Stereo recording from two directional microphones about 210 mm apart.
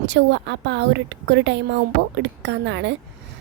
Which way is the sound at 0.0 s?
55° right (ahead or behind).